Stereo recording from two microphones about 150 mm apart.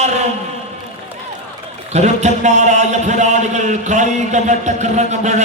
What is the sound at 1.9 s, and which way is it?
A man's voice, 50° right (ahead or behind).